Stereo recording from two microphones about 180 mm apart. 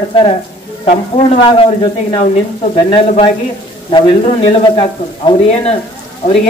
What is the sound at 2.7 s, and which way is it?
Speech, 30° left (ahead or behind).